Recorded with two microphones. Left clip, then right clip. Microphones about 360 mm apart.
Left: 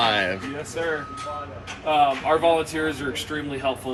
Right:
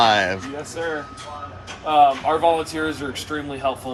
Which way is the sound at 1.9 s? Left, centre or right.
Right.